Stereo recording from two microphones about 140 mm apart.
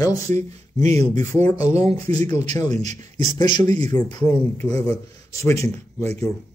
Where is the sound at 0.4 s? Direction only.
55° right (ahead or behind).